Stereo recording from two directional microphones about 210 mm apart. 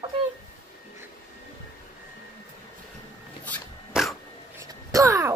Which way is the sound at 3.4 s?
5° left (ahead or behind).